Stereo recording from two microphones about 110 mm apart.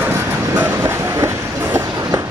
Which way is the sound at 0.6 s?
25° right (ahead or behind).